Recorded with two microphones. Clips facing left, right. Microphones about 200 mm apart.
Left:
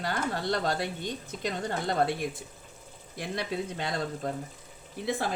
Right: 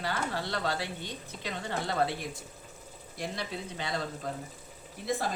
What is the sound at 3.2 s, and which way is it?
Speech, 55° left (ahead or behind).